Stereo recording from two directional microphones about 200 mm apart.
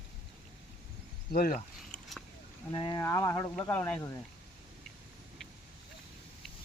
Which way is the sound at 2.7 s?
20° left (ahead or behind).